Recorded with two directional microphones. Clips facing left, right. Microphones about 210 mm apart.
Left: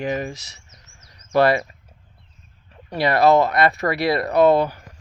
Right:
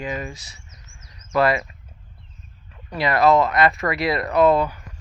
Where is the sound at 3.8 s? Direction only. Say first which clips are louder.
Left 2 dB; 35° left (ahead or behind).